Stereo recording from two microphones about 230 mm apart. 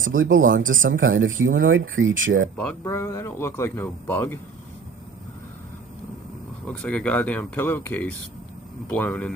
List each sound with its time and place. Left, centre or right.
0.0 s speech: right
1.0 s speech: right
1.6 s speech: right
2.0 s speech: right
2.6 s speech: centre
6.7 s speech: centre